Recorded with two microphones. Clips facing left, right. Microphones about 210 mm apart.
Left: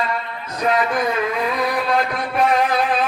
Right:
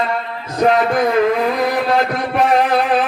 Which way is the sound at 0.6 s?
55° right (ahead or behind).